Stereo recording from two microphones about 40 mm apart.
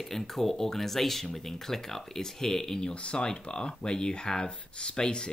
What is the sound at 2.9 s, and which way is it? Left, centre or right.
Speech, left.